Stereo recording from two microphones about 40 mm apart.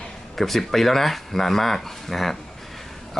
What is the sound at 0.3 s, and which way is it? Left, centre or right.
Speech, centre.